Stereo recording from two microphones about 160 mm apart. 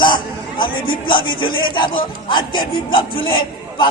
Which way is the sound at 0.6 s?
65° left (ahead or behind).